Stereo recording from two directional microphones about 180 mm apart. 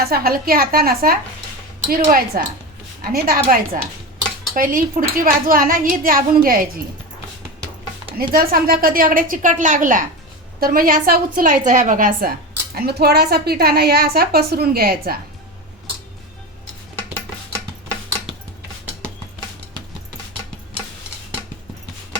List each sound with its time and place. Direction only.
0.0 s a woman's voice: 55° right (ahead or behind)
8.2 s a woman's voice: 55° right (ahead or behind)
12.7 s a woman's voice: 60° right (ahead or behind)